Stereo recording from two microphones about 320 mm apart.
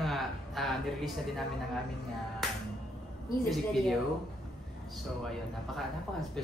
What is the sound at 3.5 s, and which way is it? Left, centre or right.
Speech, centre.